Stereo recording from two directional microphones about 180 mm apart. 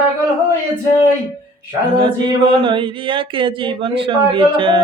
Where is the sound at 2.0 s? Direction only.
25° right (ahead or behind).